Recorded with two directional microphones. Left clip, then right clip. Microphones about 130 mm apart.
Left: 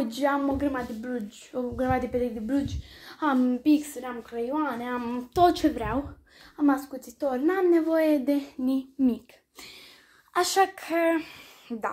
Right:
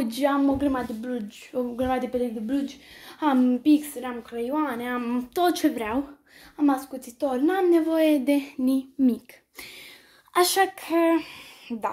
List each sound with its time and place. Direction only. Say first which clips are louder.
0.0 s speech: right 2 dB; 20° right (ahead or behind)
3.6 s a child's voice: right 2 dB; 5° right (ahead or behind)